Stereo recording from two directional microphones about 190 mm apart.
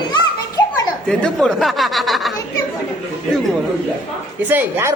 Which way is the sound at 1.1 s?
5° left (ahead or behind).